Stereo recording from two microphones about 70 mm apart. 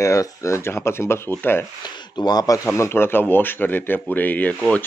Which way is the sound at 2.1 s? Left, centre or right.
Left.